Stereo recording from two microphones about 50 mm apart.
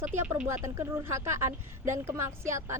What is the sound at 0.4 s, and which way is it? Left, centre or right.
Speech, right.